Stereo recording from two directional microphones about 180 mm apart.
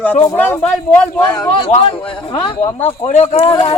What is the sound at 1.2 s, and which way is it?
Speech, 20° left (ahead or behind).